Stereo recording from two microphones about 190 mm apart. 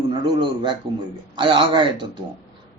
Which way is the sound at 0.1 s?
25° right (ahead or behind).